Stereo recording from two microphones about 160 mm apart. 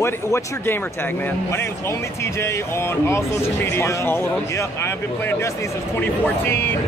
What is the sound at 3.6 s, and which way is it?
Speech, 15° left (ahead or behind).